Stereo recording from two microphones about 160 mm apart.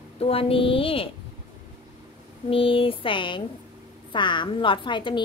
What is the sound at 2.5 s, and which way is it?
A woman's voice, 35° left (ahead or behind).